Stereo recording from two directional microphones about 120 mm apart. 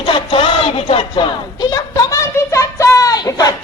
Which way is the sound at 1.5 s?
30° left (ahead or behind).